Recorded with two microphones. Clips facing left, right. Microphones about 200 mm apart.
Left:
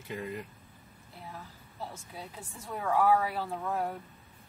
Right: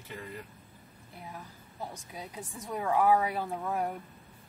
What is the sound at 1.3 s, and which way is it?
A woman's voice, 15° right (ahead or behind).